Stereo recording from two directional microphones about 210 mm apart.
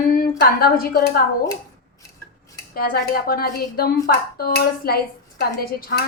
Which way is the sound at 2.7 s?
45° left (ahead or behind).